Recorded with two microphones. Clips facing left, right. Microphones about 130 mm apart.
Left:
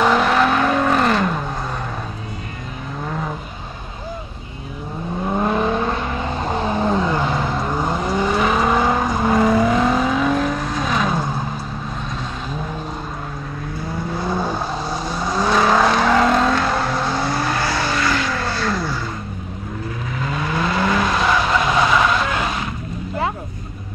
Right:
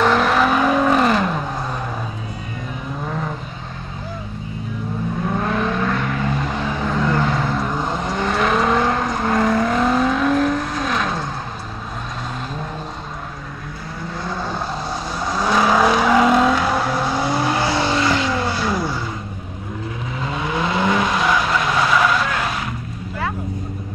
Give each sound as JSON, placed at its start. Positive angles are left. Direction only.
{"t": 0.0, "sound": "vehicle", "side_deg": 0}
{"t": 5.3, "sound": "vehicle", "side_deg": 20}
{"t": 7.1, "sound": "vehicle", "side_deg": 15}
{"t": 14.2, "sound": "vehicle", "side_deg": 15}
{"t": 14.9, "sound": "vehicle", "side_deg": 0}
{"t": 20.2, "sound": "vehicle", "side_deg": -20}
{"t": 21.2, "sound": "vehicle", "side_deg": 0}